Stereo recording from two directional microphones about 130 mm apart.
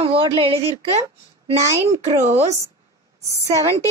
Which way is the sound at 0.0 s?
45° right (ahead or behind).